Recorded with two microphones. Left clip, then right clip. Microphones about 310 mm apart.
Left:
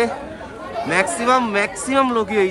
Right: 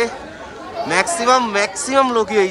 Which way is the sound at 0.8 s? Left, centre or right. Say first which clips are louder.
Right 2 dB; centre.